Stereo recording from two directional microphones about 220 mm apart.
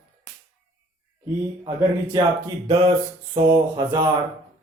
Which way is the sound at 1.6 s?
15° right (ahead or behind).